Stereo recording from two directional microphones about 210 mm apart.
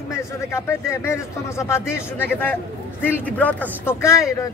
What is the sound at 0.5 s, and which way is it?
A man's voice, 15° left (ahead or behind).